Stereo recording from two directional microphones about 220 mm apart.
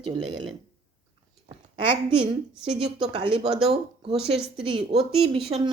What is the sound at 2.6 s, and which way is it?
A woman's voice, 25° right (ahead or behind).